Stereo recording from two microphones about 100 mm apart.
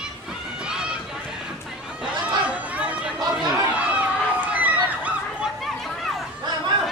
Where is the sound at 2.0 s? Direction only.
15° right (ahead or behind).